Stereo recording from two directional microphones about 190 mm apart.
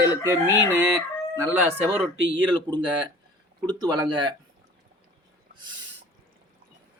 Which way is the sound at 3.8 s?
20° right (ahead or behind).